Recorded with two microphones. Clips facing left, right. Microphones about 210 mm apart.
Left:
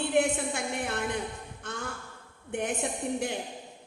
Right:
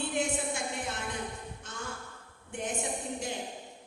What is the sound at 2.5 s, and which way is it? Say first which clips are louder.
Speech: left 4 dB; 60° left (ahead or behind).